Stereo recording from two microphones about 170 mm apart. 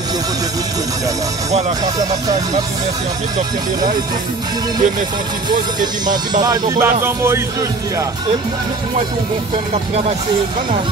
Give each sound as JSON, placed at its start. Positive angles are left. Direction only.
{"t": 2.0, "sound": "speech", "side_deg": -20}
{"t": 6.4, "sound": "speech", "side_deg": -20}